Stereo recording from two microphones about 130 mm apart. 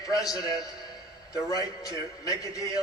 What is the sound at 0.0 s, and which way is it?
A man's voice, 25° left (ahead or behind).